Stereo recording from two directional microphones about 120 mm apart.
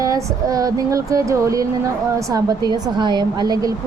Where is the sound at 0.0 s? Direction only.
30° right (ahead or behind).